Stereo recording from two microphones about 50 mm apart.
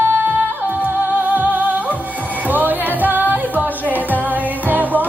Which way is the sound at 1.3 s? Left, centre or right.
Right.